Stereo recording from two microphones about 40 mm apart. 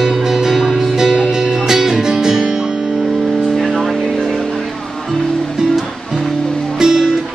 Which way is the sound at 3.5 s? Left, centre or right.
Centre.